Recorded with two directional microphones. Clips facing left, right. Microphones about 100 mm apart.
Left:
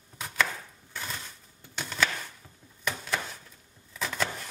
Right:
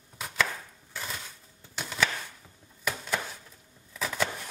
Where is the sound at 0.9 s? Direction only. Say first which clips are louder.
Even; centre (ahead or behind).